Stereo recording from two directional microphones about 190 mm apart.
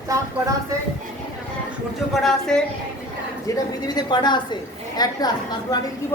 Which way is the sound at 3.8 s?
20° left (ahead or behind).